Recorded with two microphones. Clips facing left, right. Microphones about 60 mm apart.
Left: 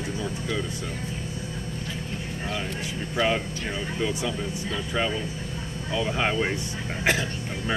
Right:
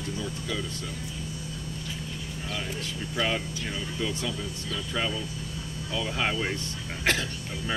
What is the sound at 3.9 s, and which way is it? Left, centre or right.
Speech, left.